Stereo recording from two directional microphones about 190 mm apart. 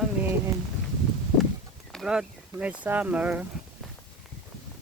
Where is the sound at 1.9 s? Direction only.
5° right (ahead or behind).